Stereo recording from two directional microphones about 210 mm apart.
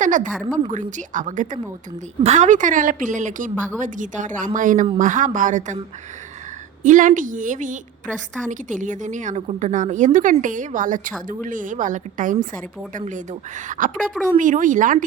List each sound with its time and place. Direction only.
0.0 s a woman's voice: 35° right (ahead or behind)
6.8 s a woman's voice: 40° right (ahead or behind)
13.7 s a woman's voice: 40° right (ahead or behind)